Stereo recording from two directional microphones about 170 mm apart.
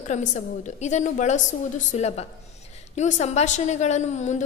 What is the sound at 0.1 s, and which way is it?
A woman's voice, 45° left (ahead or behind).